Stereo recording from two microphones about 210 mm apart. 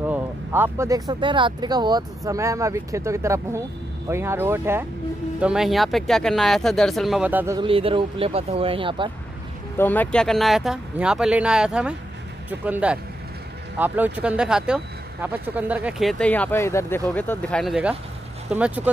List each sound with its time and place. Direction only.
0.0 s speech: 10° right (ahead or behind)
7.5 s speech: 25° right (ahead or behind)
9.8 s speech: 10° left (ahead or behind); by 18.9 s 5° right (ahead or behind)